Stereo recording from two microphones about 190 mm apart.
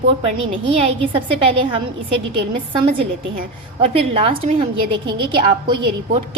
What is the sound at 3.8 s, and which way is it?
A woman's voice, 30° right (ahead or behind).